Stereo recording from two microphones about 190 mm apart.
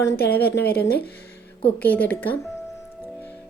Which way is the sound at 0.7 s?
55° left (ahead or behind).